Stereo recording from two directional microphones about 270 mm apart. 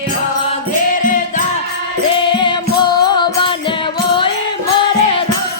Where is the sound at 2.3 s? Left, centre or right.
Centre.